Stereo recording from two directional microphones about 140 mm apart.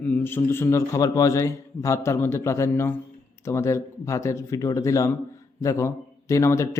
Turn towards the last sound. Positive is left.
turn(degrees=20)  # may be behind; listen again after turning